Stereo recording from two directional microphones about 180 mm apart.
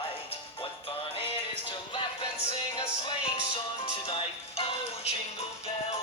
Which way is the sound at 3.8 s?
35° left (ahead or behind).